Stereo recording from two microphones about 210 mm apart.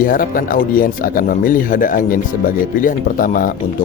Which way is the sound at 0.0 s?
40° left (ahead or behind).